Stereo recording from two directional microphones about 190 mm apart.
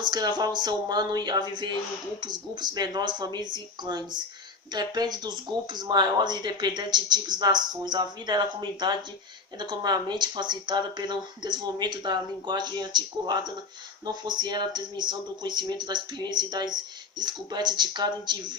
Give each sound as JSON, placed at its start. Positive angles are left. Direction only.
{"t": 0.0, "sound": "speech", "side_deg": -20}
{"t": 9.6, "sound": "speech", "side_deg": -20}